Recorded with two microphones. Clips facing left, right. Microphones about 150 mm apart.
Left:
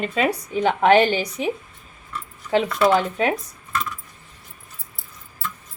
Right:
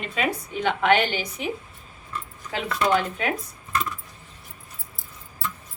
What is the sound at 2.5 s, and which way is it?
Speech, 35° left (ahead or behind).